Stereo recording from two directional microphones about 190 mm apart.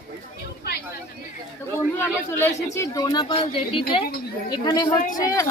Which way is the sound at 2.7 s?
15° left (ahead or behind).